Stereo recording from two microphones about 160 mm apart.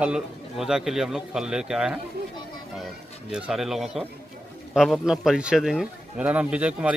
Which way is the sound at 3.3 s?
Centre (ahead or behind).